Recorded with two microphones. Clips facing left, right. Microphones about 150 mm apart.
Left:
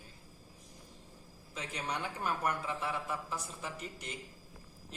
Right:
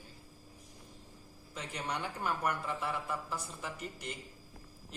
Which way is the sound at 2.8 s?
Centre (ahead or behind).